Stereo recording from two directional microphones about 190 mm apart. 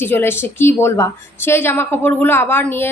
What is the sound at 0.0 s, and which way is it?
A woman's voice, 10° left (ahead or behind).